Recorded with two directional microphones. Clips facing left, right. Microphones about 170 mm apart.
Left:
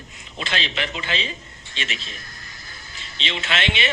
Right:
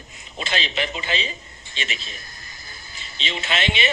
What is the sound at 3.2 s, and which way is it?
Speech, 40° right (ahead or behind).